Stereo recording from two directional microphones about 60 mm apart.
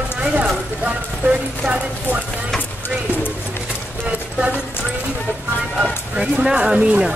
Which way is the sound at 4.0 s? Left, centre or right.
Right.